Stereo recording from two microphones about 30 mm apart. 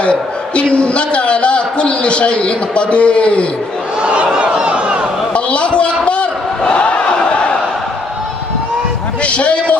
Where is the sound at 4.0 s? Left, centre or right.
Right.